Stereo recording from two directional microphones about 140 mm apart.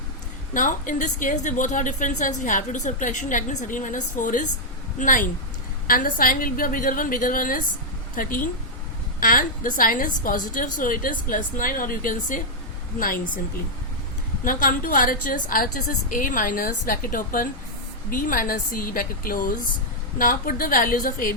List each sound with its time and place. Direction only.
0.5 s a woman's voice: 70° left (ahead or behind)
5.9 s a woman's voice: 85° left
14.4 s a woman's voice: 75° left (ahead or behind)
18.1 s a woman's voice: 75° left (ahead or behind)